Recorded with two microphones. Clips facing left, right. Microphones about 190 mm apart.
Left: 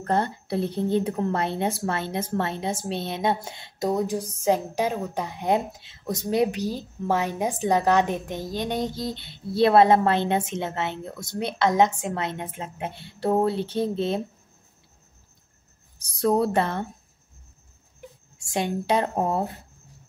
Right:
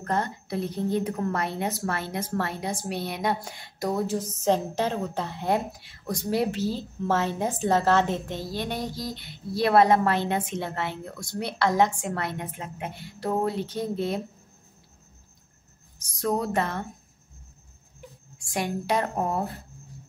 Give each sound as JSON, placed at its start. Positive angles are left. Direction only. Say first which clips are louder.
{"t": 0.0, "sound": "a woman's voice", "louder": "left 3 dB", "side_deg": 30}
{"t": 16.2, "sound": "a woman's voice", "louder": "left 4 dB", "side_deg": 30}
{"t": 18.4, "sound": "a woman's voice", "louder": "left 3 dB", "side_deg": 25}